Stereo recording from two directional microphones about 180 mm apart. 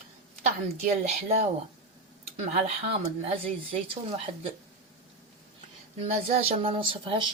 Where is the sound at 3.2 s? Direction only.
30° right (ahead or behind).